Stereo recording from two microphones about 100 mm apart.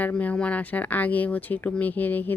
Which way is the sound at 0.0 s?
15° left (ahead or behind).